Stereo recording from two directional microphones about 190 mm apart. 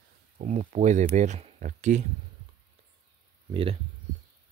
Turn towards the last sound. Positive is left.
turn(degrees=-30)  # may be behind; listen again after turning